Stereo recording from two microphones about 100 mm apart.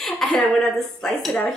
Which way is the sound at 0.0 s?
5° left (ahead or behind).